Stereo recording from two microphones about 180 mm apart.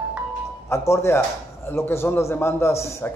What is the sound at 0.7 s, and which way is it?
A man's voice, 15° left (ahead or behind).